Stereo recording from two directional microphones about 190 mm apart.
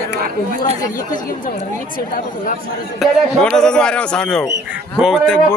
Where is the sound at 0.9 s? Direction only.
15° left (ahead or behind).